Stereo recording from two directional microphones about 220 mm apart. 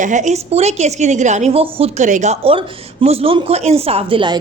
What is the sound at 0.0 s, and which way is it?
A woman's voice, 35° right (ahead or behind).